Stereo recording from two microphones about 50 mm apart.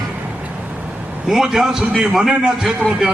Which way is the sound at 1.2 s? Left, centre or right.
Centre.